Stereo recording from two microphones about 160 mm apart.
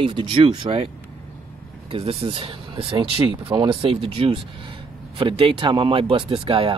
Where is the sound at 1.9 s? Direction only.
35° right (ahead or behind).